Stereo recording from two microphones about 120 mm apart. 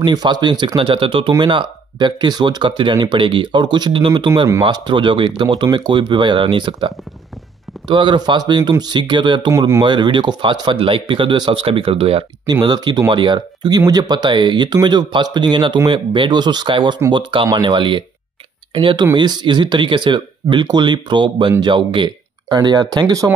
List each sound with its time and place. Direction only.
0.0 s speech: 35° right (ahead or behind)
7.9 s speech: 40° right (ahead or behind)
12.6 s speech: 35° right (ahead or behind)